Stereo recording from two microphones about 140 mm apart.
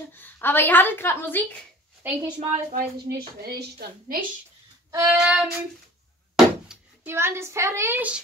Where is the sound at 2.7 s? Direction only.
90° right.